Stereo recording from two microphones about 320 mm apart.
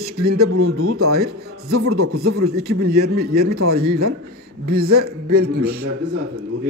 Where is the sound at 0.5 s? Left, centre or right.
Right.